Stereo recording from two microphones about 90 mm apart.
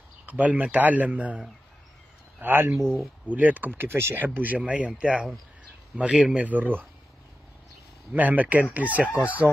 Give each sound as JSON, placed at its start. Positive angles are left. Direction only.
{"t": 0.3, "sound": "speech", "side_deg": -15}
{"t": 2.4, "sound": "speech", "side_deg": -25}
{"t": 2.8, "sound": "speech", "side_deg": 5}
{"t": 3.3, "sound": "speech", "side_deg": -20}
{"t": 8.1, "sound": "speech", "side_deg": -20}